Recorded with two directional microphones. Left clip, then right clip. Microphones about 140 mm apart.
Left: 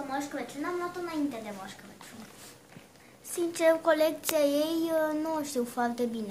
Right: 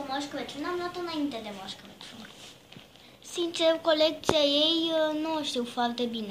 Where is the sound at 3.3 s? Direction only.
25° left (ahead or behind).